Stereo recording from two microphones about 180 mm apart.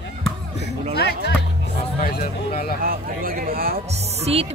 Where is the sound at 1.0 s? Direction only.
65° left (ahead or behind).